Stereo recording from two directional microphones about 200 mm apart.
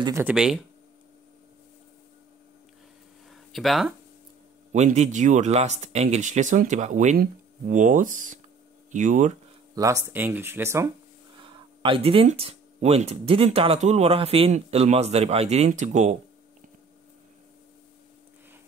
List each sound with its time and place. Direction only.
0.0 s speech: 10° right (ahead or behind)
3.5 s speech: centre (ahead or behind)
4.7 s speech: 35° right (ahead or behind)
9.8 s speech: 15° right (ahead or behind)
11.3 s speech: 25° right (ahead or behind)